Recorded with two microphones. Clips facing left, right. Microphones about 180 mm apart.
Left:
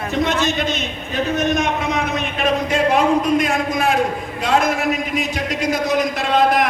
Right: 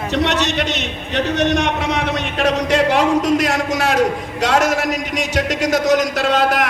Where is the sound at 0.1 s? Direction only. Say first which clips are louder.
Right 1 dB; 75° right (ahead or behind).